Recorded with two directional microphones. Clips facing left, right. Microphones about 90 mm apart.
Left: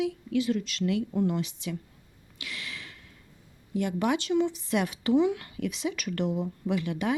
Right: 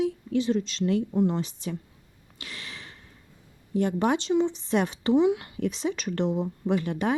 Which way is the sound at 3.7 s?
35° right (ahead or behind).